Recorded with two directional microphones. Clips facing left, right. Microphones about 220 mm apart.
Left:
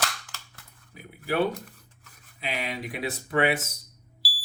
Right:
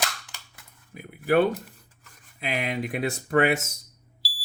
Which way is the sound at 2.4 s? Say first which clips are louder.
Right 4 dB; 50° right (ahead or behind).